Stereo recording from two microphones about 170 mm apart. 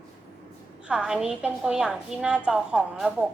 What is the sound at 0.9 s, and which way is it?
A woman's voice, 5° right (ahead or behind).